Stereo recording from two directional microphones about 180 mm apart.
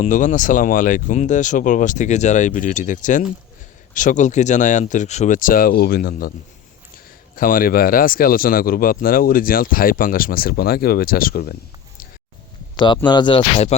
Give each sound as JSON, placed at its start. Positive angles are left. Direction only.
{"t": 0.0, "sound": "speech", "side_deg": 45}
{"t": 7.3, "sound": "speech", "side_deg": 50}
{"t": 13.1, "sound": "speech", "side_deg": 25}